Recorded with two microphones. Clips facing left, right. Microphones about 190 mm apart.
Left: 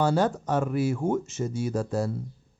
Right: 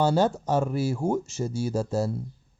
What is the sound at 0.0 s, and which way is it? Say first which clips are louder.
Speech: right 1 dB; 25° right (ahead or behind).